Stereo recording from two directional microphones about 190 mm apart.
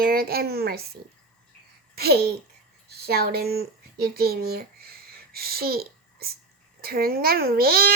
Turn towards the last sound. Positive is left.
turn(degrees=-55)  # may be behind; listen again after turning